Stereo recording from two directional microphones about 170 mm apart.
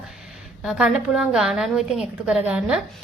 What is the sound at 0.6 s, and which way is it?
A woman's voice, 5° right (ahead or behind).